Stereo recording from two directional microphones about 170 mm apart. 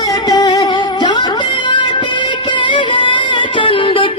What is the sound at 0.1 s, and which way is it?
Music, 25° left (ahead or behind).